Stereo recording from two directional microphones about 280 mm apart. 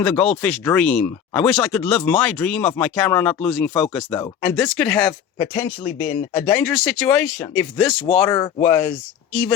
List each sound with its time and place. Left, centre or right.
0.0 s speech: centre
5.8 s speech: left
6.4 s speech: centre